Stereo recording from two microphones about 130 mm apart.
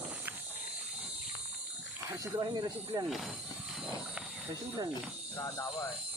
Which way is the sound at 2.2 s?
35° right (ahead or behind).